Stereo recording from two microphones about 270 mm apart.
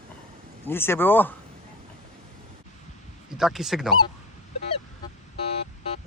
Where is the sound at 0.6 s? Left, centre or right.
Centre.